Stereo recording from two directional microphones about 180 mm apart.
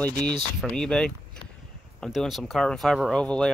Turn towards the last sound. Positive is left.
turn(degrees=5)  # may be behind; listen again after turning